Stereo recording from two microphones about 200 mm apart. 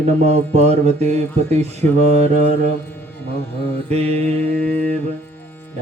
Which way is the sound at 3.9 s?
30° right (ahead or behind).